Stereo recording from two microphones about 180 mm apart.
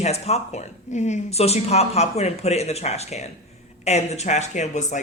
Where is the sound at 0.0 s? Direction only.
35° left (ahead or behind).